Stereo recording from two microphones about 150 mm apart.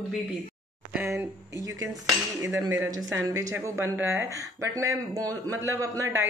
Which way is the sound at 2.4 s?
20° right (ahead or behind).